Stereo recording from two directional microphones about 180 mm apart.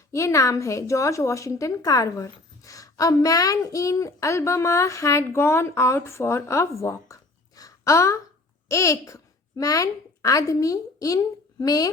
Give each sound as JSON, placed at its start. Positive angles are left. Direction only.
{"t": 0.1, "sound": "a woman's voice", "side_deg": 15}